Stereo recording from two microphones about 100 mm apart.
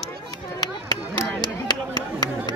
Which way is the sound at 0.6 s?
45° left (ahead or behind).